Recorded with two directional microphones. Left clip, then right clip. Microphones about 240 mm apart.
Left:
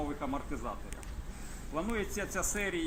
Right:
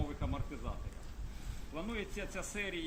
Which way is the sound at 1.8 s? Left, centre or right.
Centre.